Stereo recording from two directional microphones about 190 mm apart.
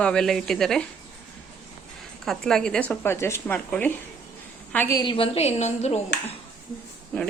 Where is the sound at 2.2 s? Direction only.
Centre (ahead or behind); by 6.0 s 35° left (ahead or behind).